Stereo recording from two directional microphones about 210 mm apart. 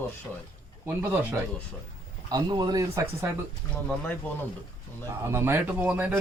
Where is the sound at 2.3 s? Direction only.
20° right (ahead or behind).